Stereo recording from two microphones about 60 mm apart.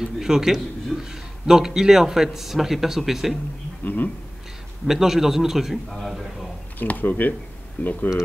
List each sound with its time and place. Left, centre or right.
0.0 s speech: centre
0.9 s a man's voice: centre
1.4 s speech: centre
3.8 s speech: left
4.8 s a man's voice: centre
5.9 s a man's voice: centre
6.8 s speech: left